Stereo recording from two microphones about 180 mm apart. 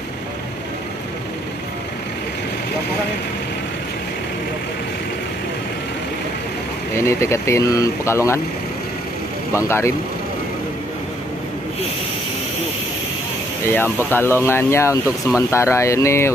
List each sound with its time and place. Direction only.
7.0 s speech: 15° left (ahead or behind)
9.5 s speech: 15° left (ahead or behind)
14.1 s speech: 15° left (ahead or behind)
15.0 s speech: 5° right (ahead or behind)
15.5 s speech: 15° left (ahead or behind)